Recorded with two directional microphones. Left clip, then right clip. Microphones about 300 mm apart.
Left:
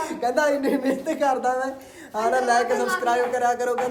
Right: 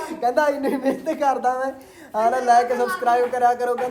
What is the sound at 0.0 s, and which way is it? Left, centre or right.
Speech, centre.